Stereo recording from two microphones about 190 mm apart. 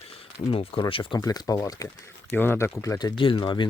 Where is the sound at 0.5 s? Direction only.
30° left (ahead or behind).